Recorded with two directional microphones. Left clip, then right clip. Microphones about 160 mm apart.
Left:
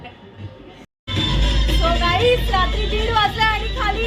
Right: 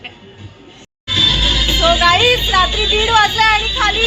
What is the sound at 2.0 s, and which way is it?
Vehicle, 25° right (ahead or behind).